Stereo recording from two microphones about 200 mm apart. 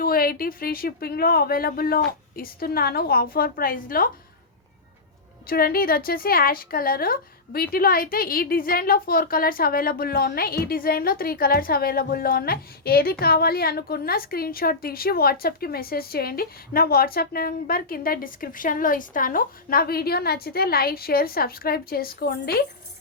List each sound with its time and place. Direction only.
0.0 s speech: 45° left (ahead or behind)
5.5 s speech: 50° left (ahead or behind)